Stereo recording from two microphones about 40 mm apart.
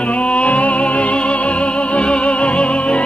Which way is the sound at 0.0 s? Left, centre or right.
Left.